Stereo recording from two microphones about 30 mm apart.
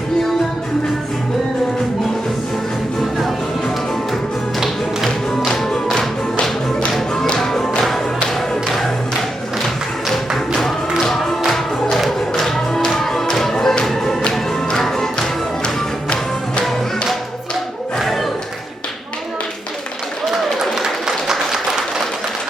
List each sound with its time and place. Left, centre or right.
5.5 s music: centre
7.3 s music: centre
12.4 s music: centre
21.2 s applause: centre